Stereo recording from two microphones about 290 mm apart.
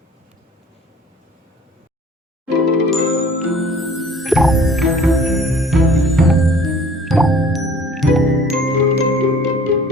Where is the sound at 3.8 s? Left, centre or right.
Centre.